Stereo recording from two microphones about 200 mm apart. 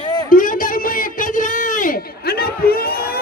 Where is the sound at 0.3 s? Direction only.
45° left (ahead or behind).